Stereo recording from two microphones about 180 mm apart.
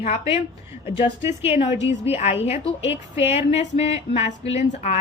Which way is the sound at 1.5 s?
35° left (ahead or behind).